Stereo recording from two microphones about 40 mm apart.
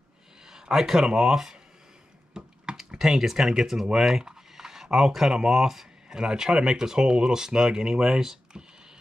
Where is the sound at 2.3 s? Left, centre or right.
Right.